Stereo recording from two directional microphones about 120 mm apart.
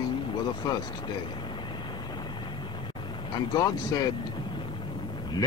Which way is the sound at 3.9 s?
30° left (ahead or behind).